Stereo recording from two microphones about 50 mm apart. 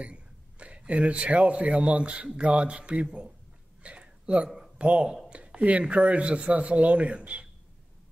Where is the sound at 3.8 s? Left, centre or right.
Right.